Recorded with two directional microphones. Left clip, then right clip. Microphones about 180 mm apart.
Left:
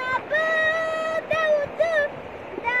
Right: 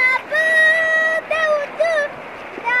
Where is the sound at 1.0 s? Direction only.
35° left (ahead or behind).